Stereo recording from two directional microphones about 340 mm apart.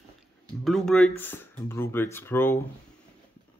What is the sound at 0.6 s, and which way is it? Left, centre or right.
Speech, centre.